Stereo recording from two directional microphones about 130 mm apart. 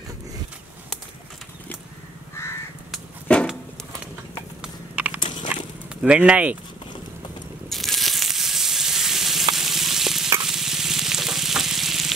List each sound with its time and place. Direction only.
2.4 s crow: 20° left (ahead or behind)
3.3 s a sound: 10° left (ahead or behind)
4.6 s a sound: 10° right (ahead or behind)
5.2 s biting: 35° left (ahead or behind)
6.0 s speech: 10° right (ahead or behind)
7.7 s sizzle: centre (ahead or behind)
9.6 s frying: centre (ahead or behind)
10.4 s stir: 5° right (ahead or behind)